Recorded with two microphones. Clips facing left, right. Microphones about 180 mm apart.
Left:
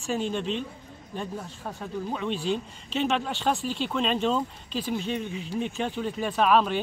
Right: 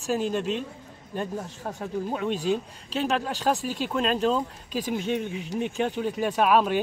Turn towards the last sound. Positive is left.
turn(degrees=-10)  # may be behind; listen again after turning